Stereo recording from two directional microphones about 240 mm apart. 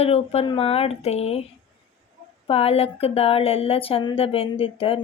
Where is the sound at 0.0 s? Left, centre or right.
Left.